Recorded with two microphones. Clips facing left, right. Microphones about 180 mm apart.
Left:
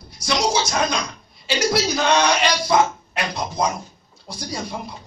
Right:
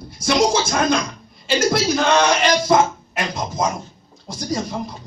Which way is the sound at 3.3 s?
Centre (ahead or behind).